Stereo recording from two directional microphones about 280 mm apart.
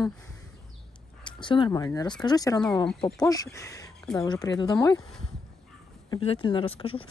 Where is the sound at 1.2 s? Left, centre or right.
Centre.